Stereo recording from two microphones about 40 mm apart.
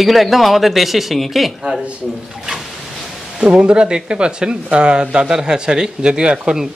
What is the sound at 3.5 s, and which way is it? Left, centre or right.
Speech, right.